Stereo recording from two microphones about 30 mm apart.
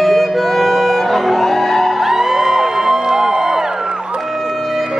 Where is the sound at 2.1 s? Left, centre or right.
Centre.